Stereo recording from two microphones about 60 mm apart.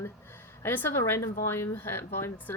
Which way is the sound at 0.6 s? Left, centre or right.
Left.